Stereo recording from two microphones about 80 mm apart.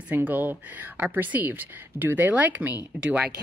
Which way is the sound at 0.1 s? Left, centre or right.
Right.